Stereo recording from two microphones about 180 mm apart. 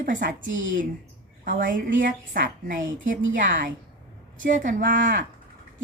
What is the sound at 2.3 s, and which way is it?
Speech, 50° right (ahead or behind).